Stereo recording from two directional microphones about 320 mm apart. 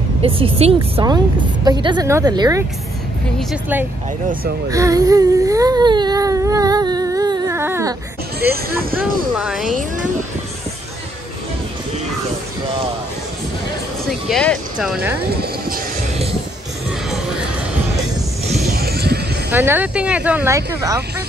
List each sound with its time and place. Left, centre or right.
0.2 s a woman's voice: centre
4.6 s baby cry: centre
8.4 s speech: right
9.4 s speech: centre
14.0 s speech: centre
15.4 s music: right
18.7 s vehicle: right
19.5 s speech: centre